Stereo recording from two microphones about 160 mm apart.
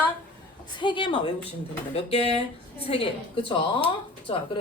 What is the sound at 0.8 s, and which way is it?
A woman's voice, 30° left (ahead or behind).